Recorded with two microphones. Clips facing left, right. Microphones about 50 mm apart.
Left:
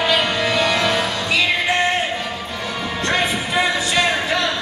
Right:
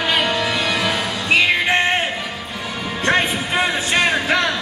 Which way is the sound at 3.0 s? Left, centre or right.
Right.